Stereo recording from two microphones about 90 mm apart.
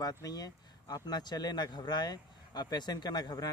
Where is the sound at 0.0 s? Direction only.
45° left (ahead or behind).